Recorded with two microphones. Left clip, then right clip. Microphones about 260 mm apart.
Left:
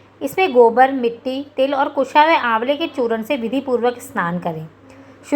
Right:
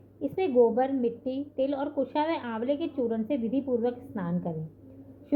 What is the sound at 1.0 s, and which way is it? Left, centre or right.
Speech, left.